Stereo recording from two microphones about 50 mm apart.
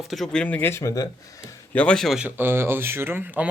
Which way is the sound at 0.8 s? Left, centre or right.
Left.